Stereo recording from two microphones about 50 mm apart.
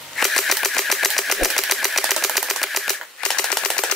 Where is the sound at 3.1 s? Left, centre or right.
Centre.